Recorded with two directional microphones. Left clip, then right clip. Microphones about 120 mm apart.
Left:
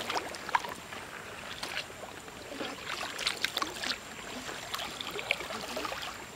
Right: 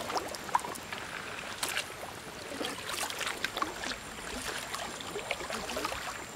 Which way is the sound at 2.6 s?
40° right (ahead or behind).